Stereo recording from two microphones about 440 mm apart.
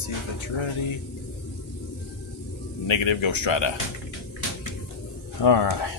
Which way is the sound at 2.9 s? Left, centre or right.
Left.